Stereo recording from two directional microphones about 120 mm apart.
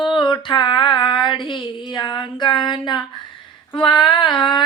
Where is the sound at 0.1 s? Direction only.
40° left (ahead or behind).